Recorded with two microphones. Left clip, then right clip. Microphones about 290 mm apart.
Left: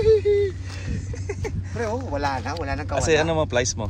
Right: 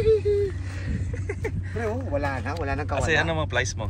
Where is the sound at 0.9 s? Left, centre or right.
Centre.